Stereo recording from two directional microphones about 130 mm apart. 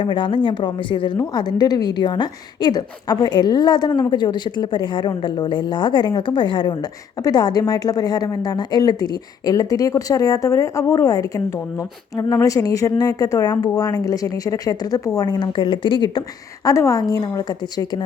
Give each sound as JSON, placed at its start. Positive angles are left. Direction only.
{"t": 0.0, "sound": "a woman's voice", "side_deg": 40}
{"t": 16.6, "sound": "a woman's voice", "side_deg": 25}